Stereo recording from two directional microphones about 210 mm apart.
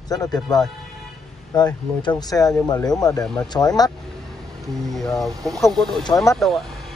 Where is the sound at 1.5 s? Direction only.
20° left (ahead or behind).